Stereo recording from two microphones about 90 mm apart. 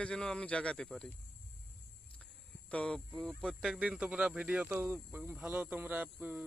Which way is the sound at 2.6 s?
10° left (ahead or behind).